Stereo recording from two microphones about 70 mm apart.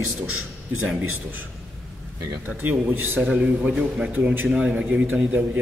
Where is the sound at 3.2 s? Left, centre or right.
Centre.